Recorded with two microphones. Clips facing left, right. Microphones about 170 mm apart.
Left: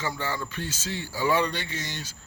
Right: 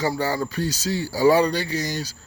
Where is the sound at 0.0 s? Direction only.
35° right (ahead or behind).